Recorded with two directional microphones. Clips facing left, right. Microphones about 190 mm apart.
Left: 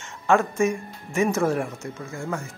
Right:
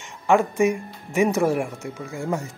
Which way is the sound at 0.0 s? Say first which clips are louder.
Right 2 dB; 15° right (ahead or behind).